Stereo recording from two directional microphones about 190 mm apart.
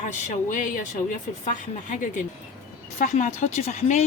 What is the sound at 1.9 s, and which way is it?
Speech, 45° left (ahead or behind).